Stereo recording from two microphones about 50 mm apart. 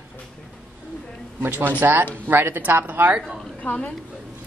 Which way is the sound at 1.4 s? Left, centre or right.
Right.